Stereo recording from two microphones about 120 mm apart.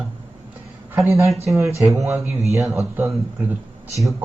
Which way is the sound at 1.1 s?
25° right (ahead or behind).